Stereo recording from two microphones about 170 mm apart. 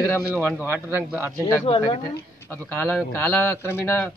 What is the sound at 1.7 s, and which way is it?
Speech, 35° left (ahead or behind).